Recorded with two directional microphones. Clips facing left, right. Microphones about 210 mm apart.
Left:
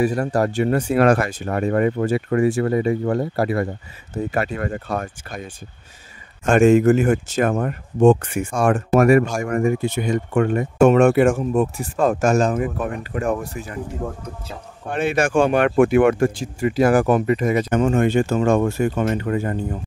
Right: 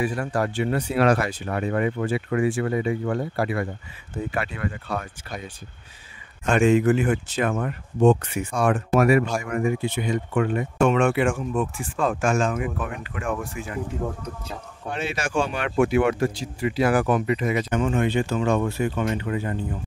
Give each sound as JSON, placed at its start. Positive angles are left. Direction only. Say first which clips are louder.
{"t": 0.0, "sound": "speech", "louder": "left 6 dB", "side_deg": 40}
{"t": 6.4, "sound": "speech", "louder": "left 5 dB", "side_deg": 45}
{"t": 14.9, "sound": "speech", "louder": "left 8 dB", "side_deg": 55}